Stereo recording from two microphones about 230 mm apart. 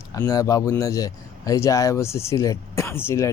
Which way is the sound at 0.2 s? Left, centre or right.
Centre.